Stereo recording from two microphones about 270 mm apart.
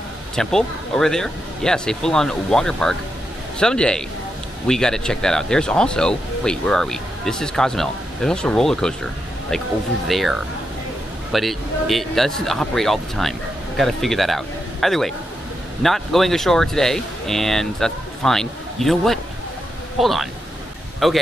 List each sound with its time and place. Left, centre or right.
0.4 s speech: centre
10.0 s speech: centre